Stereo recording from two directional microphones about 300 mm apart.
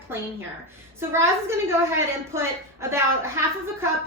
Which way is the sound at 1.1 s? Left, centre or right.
Centre.